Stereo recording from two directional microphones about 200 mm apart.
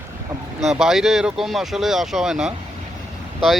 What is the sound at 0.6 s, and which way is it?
Speech, centre (ahead or behind).